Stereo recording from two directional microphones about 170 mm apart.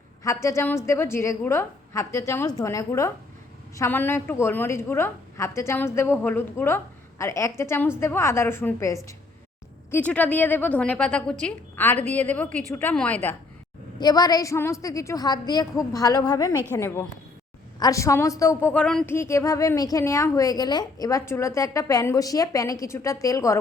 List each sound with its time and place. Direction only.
0.2 s a woman's voice: 15° left (ahead or behind)
14.0 s a woman's voice: 25° left (ahead or behind)